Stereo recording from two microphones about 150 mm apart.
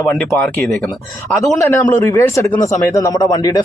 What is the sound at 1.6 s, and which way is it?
A man's voice, 15° left (ahead or behind).